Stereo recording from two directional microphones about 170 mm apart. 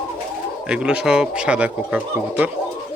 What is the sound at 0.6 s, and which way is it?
Speech, 5° right (ahead or behind).